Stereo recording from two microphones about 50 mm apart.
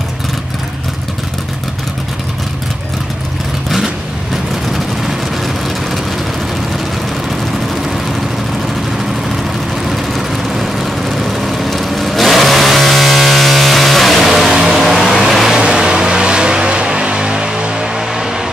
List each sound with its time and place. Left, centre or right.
3.7 s vehicle: centre
9.8 s vehicle: centre
15.5 s vehicle: centre